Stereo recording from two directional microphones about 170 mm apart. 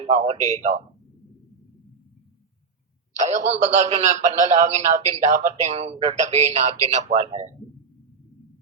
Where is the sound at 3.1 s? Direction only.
45° right (ahead or behind).